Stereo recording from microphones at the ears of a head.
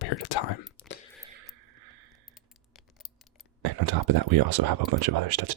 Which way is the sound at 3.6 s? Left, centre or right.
Right.